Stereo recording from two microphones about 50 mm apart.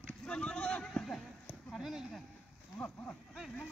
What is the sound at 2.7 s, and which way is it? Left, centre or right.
Livestock, left.